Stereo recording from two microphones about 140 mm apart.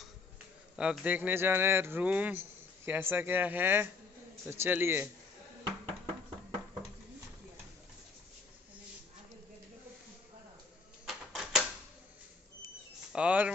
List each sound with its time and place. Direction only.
0.7 s speech: 10° right (ahead or behind)
11.1 s typewriter: 5° right (ahead or behind)
13.1 s a sound: 10° right (ahead or behind)